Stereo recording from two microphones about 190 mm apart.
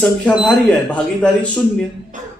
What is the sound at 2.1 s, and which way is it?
Music, 40° right (ahead or behind).